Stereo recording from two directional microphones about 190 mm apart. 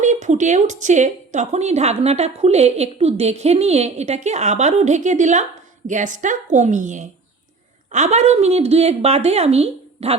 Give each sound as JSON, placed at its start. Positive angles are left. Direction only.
{"t": 0.0, "sound": "a woman's voice", "side_deg": -40}